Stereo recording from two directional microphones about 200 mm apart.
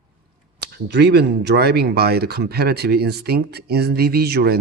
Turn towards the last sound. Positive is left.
turn(degrees=-50)  # may be behind; listen again after turning